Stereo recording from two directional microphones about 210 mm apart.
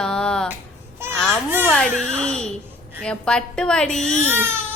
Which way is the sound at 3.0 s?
5° left (ahead or behind).